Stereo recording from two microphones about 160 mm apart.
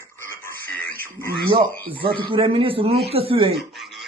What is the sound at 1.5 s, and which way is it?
A man's voice, 30° right (ahead or behind).